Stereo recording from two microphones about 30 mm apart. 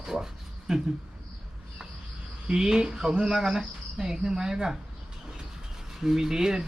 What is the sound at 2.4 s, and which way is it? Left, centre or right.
Speech, right.